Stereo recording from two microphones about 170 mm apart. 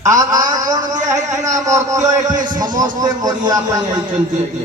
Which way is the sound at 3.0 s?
25° right (ahead or behind).